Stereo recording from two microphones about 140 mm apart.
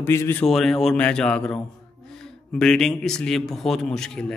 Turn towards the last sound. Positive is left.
turn(degrees=5)  # may be behind; listen again after turning